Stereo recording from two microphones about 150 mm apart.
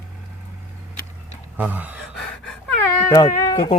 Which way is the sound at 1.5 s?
10° right (ahead or behind).